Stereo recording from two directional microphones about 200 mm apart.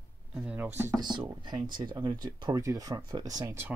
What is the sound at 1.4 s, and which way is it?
Speech, 20° right (ahead or behind).